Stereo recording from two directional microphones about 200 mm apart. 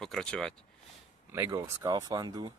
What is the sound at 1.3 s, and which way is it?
Speech, 15° right (ahead or behind).